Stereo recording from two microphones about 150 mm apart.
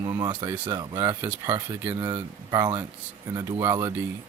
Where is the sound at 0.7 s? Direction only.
30° right (ahead or behind).